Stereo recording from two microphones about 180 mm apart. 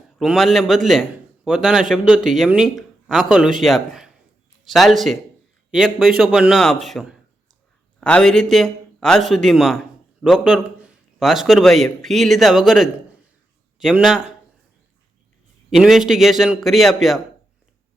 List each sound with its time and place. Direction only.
0.2 s a man's voice: centre (ahead or behind)
15.7 s a man's voice: 5° right (ahead or behind)